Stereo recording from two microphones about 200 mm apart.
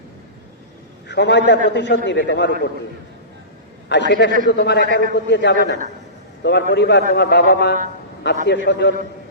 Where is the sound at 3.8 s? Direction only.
60° left (ahead or behind).